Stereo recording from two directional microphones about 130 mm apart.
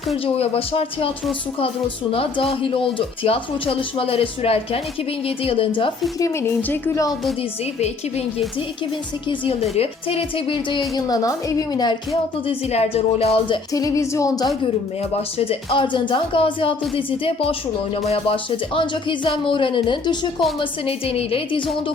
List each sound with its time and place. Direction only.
0.3 s speech: 50° left (ahead or behind)
2.1 s speech: 45° left (ahead or behind)
6.1 s speech: 25° left (ahead or behind)
6.6 s speech: 15° left (ahead or behind)
9.3 s a woman's voice: 45° left (ahead or behind)
12.5 s speech: 50° left (ahead or behind)
13.7 s speech: 25° left (ahead or behind)
15.1 s a woman's voice: 50° left (ahead or behind)